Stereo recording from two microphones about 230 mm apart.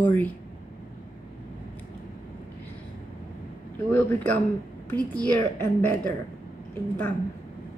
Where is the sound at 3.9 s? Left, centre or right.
Centre.